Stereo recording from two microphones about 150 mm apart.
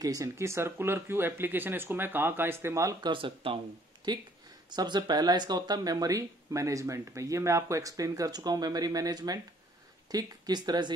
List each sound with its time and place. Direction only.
0.0 s speech: 25° right (ahead or behind)
3.1 s speech: 35° right (ahead or behind)